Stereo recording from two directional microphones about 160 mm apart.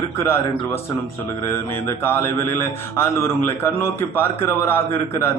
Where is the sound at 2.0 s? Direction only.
15° left (ahead or behind).